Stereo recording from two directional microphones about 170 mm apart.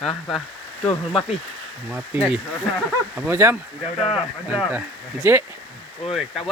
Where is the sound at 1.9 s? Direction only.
10° right (ahead or behind).